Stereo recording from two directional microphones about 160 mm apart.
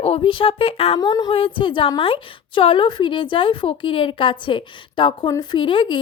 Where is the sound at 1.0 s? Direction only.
25° left (ahead or behind).